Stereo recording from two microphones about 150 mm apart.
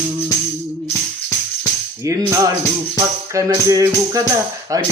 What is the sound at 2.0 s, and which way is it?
Speech, 20° right (ahead or behind).